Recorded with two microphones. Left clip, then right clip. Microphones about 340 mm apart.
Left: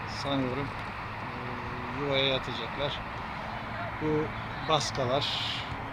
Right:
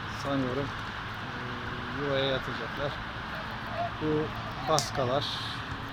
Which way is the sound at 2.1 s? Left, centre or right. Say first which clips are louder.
Left 2 dB; centre.